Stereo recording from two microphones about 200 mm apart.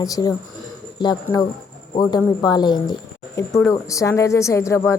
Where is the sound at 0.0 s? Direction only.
20° left (ahead or behind).